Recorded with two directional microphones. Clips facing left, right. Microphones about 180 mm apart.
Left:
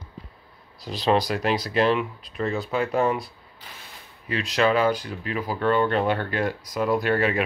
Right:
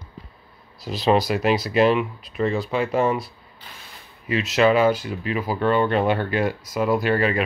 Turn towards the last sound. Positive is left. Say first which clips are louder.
# right 2 dB
turn(degrees=0)  # may be behind; listen again after turning